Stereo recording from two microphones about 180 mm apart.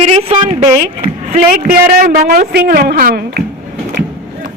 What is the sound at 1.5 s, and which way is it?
A woman's voice, 50° right (ahead or behind).